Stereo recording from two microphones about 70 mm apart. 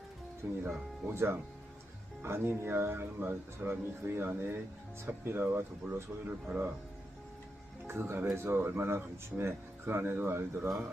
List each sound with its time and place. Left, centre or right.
0.4 s speech: right
7.9 s speech: right